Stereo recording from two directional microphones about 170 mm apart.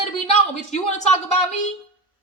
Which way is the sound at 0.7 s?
40° left (ahead or behind).